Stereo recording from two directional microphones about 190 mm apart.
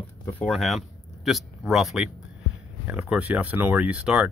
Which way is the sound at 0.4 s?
Centre (ahead or behind).